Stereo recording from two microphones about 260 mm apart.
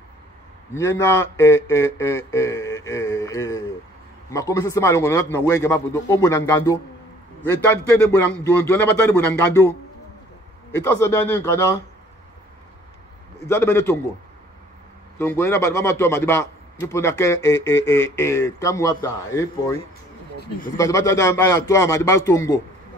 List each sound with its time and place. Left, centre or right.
0.7 s a man's voice: centre
8.3 s a man's voice: centre
10.8 s a man's voice: centre
13.5 s a man's voice: centre
15.1 s a man's voice: centre
20.3 s speech: left
20.7 s a man's voice: centre